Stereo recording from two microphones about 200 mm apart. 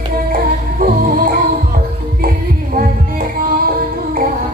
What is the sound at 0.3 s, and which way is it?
Music, 45° right (ahead or behind).